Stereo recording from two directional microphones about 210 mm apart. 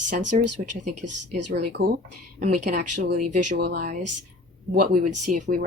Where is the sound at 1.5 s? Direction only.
50° right (ahead or behind).